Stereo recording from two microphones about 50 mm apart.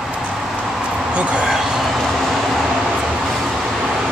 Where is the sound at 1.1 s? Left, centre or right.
Right.